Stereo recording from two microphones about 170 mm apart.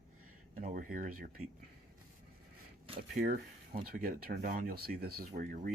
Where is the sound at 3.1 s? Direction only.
60° right (ahead or behind).